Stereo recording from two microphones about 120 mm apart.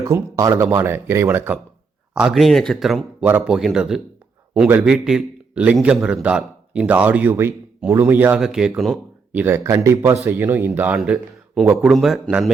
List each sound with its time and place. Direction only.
0.0 s speech: 25° right (ahead or behind)
2.1 s speech: centre (ahead or behind)
3.2 s speech: 15° right (ahead or behind)
3.4 s a man's voice: 5° right (ahead or behind)
8.4 s speech: 5° right (ahead or behind)
9.3 s speech: 15° right (ahead or behind)
9.6 s speech: 25° right (ahead or behind)
10.9 s speech: 5° right (ahead or behind)